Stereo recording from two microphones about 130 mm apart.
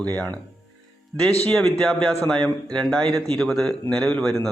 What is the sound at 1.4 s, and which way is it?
Speech, 5° left (ahead or behind).